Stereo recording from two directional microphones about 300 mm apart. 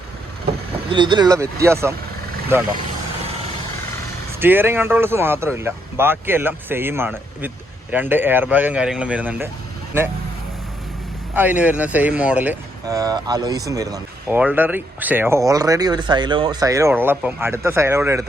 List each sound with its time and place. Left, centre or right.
0.9 s speech: centre
4.4 s speech: centre
11.3 s speech: centre